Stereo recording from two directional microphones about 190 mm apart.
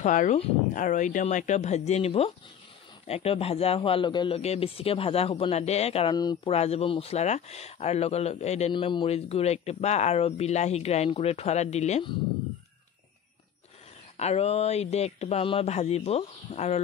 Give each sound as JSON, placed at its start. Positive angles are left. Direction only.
{"t": 0.0, "sound": "speech", "side_deg": 40}
{"t": 6.1, "sound": "speech", "side_deg": 20}
{"t": 6.5, "sound": "speech", "side_deg": 35}
{"t": 14.1, "sound": "speech", "side_deg": 35}